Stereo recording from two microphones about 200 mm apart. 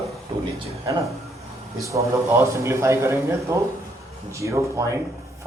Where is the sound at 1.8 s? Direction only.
15° right (ahead or behind).